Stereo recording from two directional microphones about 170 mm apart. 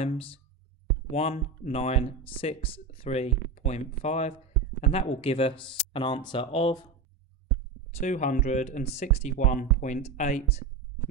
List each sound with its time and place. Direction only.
0.0 s speech: 35° left (ahead or behind)
8.0 s speech: 45° left (ahead or behind)